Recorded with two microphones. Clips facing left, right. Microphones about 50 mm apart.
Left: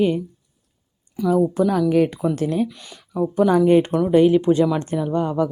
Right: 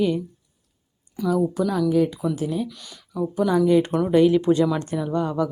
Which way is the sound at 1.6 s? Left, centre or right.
Left.